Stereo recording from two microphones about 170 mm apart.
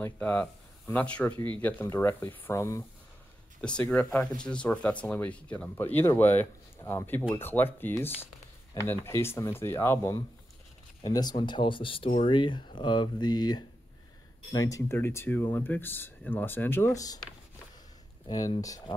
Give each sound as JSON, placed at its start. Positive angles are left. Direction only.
{"t": 0.0, "sound": "speech", "side_deg": 10}
{"t": 1.3, "sound": "speech", "side_deg": -25}
{"t": 1.6, "sound": "speech", "side_deg": 10}